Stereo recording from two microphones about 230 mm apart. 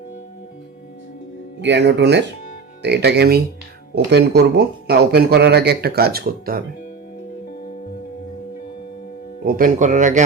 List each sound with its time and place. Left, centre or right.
1.6 s speech: right
9.5 s a man's voice: right